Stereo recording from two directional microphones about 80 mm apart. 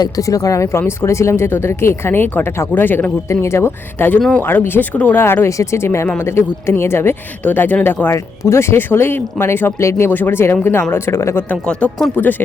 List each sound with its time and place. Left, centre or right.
0.0 s speech: left
4.3 s speech: left
5.2 s speech: left
8.0 s speech: left
12.1 s speech: left